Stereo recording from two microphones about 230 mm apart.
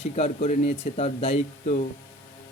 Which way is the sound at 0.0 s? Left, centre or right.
Left.